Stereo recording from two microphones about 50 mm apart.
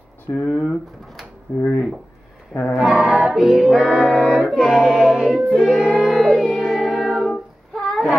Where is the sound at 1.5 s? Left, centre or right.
Left.